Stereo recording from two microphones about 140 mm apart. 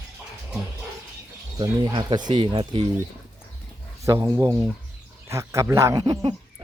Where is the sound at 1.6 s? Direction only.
30° right (ahead or behind).